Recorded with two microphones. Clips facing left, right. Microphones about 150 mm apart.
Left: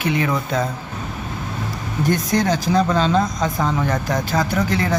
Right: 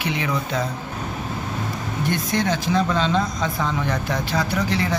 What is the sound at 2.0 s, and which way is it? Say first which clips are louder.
Speech: left 4 dB; 40° left (ahead or behind).